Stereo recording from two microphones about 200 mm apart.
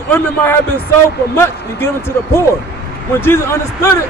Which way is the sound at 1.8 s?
10° left (ahead or behind).